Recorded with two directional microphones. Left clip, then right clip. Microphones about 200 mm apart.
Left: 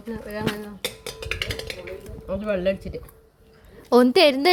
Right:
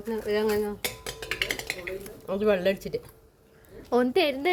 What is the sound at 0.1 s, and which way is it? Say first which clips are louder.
Dishes: right 5 dB; 55° right (ahead or behind).